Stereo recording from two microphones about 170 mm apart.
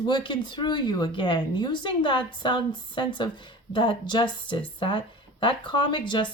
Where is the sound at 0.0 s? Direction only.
30° left (ahead or behind).